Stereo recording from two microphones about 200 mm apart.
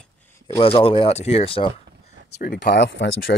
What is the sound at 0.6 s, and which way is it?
Speech, 30° left (ahead or behind).